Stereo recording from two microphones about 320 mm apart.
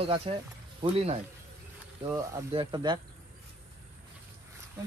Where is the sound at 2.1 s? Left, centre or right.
Centre.